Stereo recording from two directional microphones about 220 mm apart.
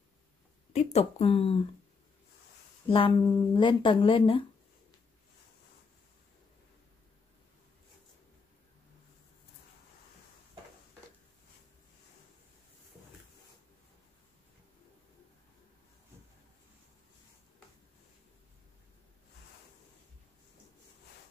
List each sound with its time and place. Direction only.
0.7 s speech: 30° left (ahead or behind)
2.9 s speech: 20° left (ahead or behind)